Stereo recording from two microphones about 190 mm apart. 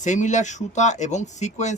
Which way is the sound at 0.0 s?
40° left (ahead or behind).